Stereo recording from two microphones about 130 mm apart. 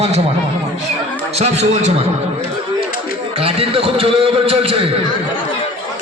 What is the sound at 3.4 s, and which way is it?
A man's voice, 45° right (ahead or behind).